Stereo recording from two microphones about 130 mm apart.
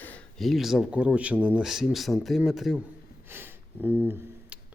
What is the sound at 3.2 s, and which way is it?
Snort, 15° right (ahead or behind).